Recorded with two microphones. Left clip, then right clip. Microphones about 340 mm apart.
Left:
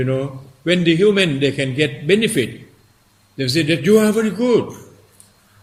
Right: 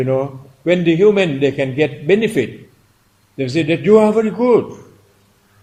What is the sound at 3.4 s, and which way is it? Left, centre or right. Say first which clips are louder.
A man's voice: right 1 dB; centre.